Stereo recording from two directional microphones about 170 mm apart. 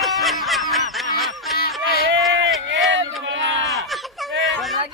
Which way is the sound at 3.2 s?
90° right.